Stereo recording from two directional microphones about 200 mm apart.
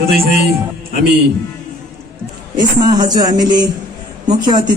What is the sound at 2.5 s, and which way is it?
A man's voice, 20° right (ahead or behind).